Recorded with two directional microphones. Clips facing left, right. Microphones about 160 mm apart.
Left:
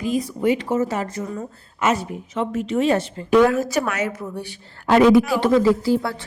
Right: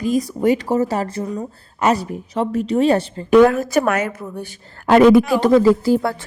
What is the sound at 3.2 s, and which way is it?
A woman's voice, 55° right (ahead or behind).